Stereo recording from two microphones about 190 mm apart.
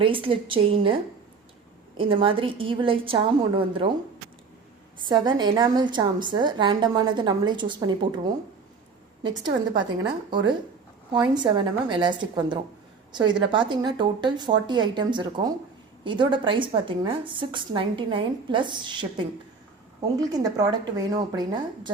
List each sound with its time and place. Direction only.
0.0 s a woman's voice: 30° right (ahead or behind)
2.0 s a woman's voice: 25° right (ahead or behind)
5.0 s a woman's voice: 20° right (ahead or behind)
10.2 s a woman's voice: 25° right (ahead or behind)